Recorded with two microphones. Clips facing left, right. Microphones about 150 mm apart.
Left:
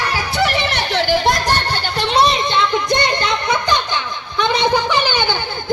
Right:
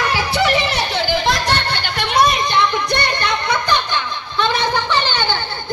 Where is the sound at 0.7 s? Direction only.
65° left (ahead or behind).